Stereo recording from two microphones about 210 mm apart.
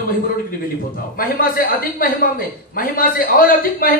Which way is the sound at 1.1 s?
45° left (ahead or behind).